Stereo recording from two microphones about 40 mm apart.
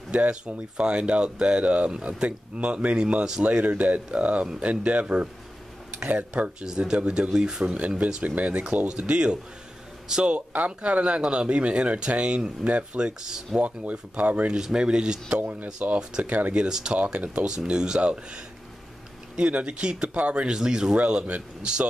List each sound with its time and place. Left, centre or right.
0.3 s speech: right
6.6 s speech: centre
7.6 s a man's voice: right; by 10.3 s centre
10.3 s speech: right
13.6 s speech: right
14.6 s speech: right
15.4 s speech: right
16.0 s speech: right
16.3 s speech: right
16.5 s speech: centre
17.0 s speech: right
17.5 s speech: centre
20.4 s speech: centre
20.9 s speech: right